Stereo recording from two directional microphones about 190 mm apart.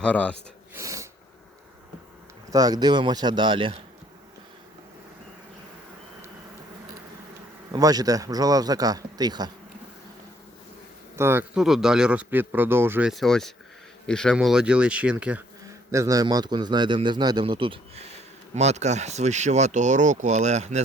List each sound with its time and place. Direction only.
0.0 s speech: 5° left (ahead or behind)
0.7 s snort: 15° right (ahead or behind)
2.5 s a man's voice: 20° right (ahead or behind)
7.7 s a man's voice: 20° right (ahead or behind)
11.2 s a man's voice: 10° right (ahead or behind); by 20.8 s 35° right (ahead or behind)